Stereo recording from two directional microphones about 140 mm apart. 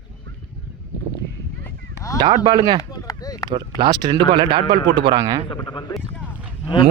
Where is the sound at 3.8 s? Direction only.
30° right (ahead or behind).